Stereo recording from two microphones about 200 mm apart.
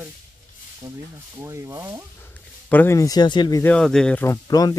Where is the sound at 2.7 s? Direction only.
10° left (ahead or behind).